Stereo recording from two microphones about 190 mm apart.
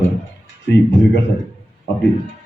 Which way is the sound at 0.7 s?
65° left (ahead or behind).